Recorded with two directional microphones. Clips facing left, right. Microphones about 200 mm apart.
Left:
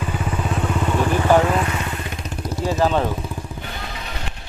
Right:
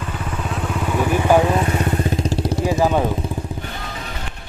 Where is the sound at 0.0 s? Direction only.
10° left (ahead or behind); by 1.6 s 15° right (ahead or behind).